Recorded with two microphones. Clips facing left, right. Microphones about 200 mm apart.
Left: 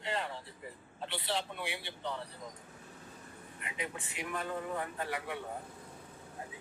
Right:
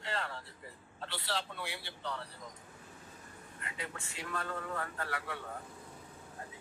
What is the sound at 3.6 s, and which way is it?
A man's voice, 20° left (ahead or behind).